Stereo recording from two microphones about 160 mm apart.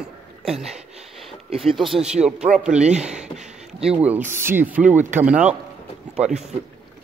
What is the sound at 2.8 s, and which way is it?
Speech, 45° right (ahead or behind).